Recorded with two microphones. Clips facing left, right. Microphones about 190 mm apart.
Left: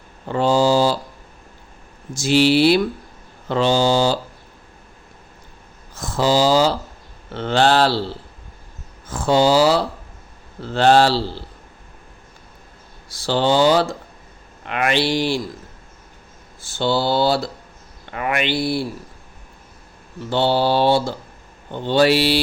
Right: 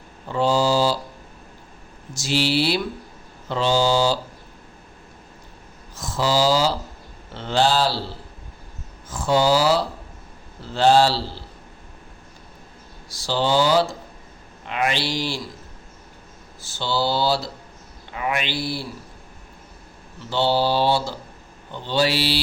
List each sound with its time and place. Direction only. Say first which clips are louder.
0.3 s speech: left 3 dB; 55° left (ahead or behind)
2.1 s speech: left 7 dB; 55° left (ahead or behind)
5.9 s speech: left 4 dB; 55° left (ahead or behind)
9.0 s speech: left 3 dB; 65° left (ahead or behind)
13.1 s speech: left 4 dB; 60° left (ahead or behind)
16.7 s speech: left 4 dB; 55° left (ahead or behind)
20.3 s speech: left 3 dB; 55° left (ahead or behind)